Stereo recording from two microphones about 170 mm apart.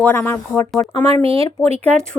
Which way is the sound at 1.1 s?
35° right (ahead or behind).